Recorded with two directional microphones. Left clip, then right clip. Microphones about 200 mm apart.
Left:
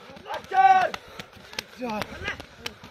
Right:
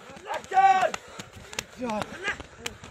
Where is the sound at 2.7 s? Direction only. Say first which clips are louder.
Even; centre (ahead or behind).